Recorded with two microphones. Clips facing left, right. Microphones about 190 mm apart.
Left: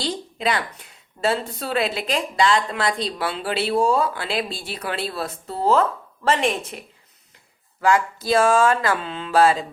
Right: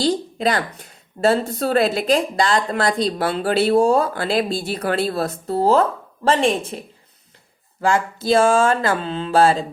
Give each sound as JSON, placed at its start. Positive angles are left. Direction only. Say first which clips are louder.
{"t": 0.0, "sound": "a woman's voice", "louder": "right 6 dB", "side_deg": -40}